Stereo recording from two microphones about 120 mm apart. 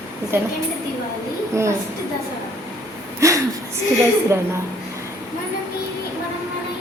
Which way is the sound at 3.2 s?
25° right (ahead or behind).